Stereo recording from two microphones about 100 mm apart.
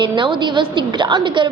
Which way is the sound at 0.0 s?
50° right (ahead or behind).